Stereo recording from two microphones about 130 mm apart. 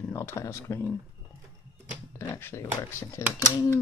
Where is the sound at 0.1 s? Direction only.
20° left (ahead or behind).